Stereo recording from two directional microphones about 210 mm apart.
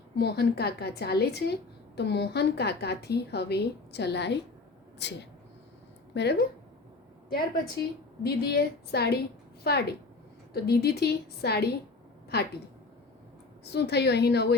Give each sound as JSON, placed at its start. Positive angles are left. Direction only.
{"t": 0.2, "sound": "a woman's voice", "side_deg": 50}
{"t": 13.7, "sound": "a woman's voice", "side_deg": 50}